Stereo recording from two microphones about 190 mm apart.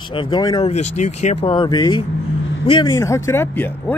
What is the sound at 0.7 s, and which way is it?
Speech, 35° left (ahead or behind).